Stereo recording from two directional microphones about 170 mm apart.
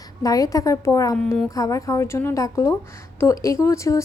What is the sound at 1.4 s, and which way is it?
A woman's voice, 20° left (ahead or behind).